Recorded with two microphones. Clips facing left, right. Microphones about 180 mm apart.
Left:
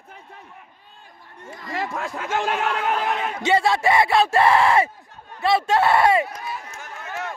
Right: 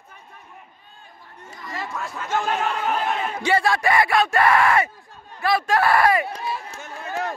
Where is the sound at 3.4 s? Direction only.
20° left (ahead or behind).